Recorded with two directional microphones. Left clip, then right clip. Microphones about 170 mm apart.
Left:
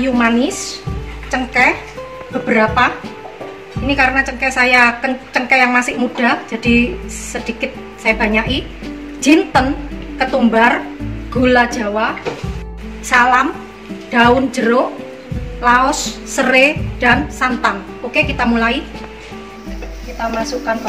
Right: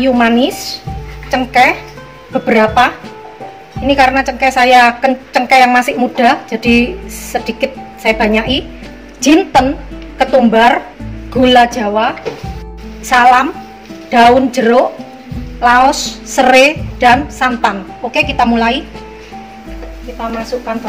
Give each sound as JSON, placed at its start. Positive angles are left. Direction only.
{"t": 0.0, "sound": "a woman's voice", "side_deg": -45}
{"t": 13.1, "sound": "a woman's voice", "side_deg": -45}